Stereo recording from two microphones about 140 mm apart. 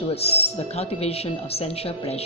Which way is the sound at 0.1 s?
45° left (ahead or behind).